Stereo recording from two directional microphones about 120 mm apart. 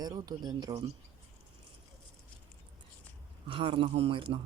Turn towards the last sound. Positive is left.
turn(degrees=-50)  # may be behind; listen again after turning